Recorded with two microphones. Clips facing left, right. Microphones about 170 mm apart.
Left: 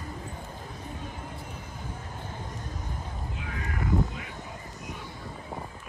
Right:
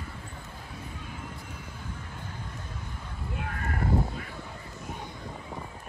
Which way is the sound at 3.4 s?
55° right (ahead or behind).